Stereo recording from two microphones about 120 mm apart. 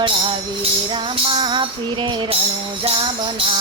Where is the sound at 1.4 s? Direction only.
40° right (ahead or behind).